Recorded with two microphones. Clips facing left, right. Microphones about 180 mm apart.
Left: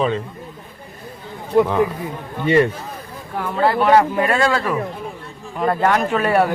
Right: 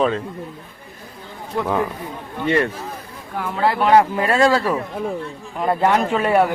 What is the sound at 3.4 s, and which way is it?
Speech, 10° right (ahead or behind).